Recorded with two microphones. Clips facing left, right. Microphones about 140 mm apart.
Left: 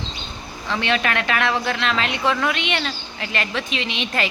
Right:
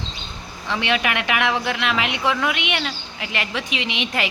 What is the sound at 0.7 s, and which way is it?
Speech, 15° right (ahead or behind).